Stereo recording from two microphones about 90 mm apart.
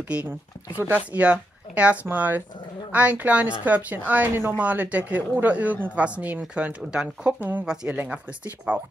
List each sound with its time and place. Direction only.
0.1 s a woman's voice: 15° right (ahead or behind)